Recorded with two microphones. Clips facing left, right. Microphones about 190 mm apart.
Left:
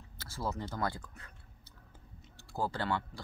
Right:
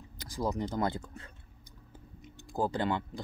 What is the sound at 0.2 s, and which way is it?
Speech, 15° right (ahead or behind).